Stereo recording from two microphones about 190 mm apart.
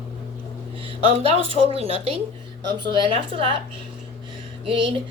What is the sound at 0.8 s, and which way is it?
Speech, 30° right (ahead or behind).